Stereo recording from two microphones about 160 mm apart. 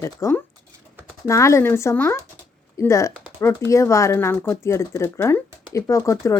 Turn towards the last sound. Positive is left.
turn(degrees=20)  # may be behind; listen again after turning